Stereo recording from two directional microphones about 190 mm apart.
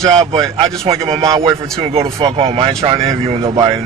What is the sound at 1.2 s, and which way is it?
Speech, 15° right (ahead or behind).